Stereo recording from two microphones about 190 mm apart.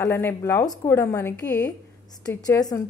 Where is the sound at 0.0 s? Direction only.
10° left (ahead or behind).